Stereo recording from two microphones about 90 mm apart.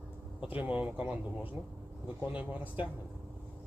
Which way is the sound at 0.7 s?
15° right (ahead or behind).